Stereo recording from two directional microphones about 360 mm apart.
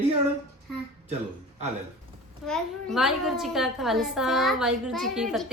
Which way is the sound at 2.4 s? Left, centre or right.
Centre.